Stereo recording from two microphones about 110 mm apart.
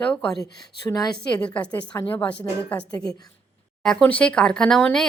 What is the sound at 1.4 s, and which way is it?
Speech, 10° left (ahead or behind).